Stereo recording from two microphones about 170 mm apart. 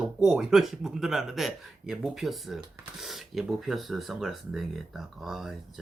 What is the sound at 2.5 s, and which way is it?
Speech, 25° right (ahead or behind).